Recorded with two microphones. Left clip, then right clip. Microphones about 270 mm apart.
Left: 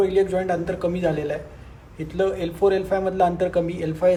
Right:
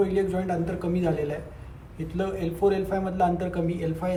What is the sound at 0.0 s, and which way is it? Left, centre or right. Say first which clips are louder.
Speech: left 5 dB; left.